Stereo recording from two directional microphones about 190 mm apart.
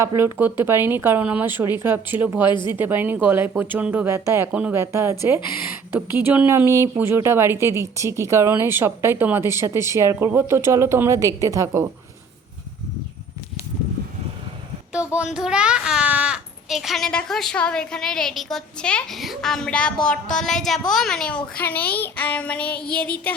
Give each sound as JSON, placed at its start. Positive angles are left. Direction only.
{"t": 0.0, "sound": "speech", "side_deg": -15}
{"t": 2.5, "sound": "speech", "side_deg": 25}
{"t": 2.7, "sound": "speech", "side_deg": -10}
{"t": 14.9, "sound": "a child's voice", "side_deg": -5}